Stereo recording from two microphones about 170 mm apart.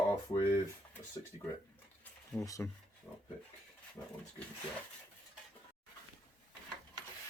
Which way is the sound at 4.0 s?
20° left (ahead or behind).